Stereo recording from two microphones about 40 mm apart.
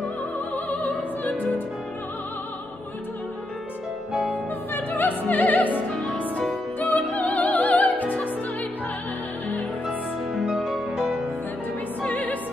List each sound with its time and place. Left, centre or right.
0.7 s music: left
4.7 s music: left
6.9 s music: left
10.4 s music: centre
12.0 s opera: left